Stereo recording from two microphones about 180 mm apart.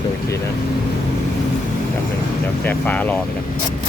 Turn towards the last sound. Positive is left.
turn(degrees=10)  # may be behind; listen again after turning